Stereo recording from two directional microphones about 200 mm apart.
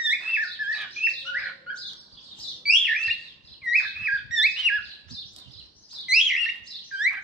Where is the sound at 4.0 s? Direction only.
5° right (ahead or behind).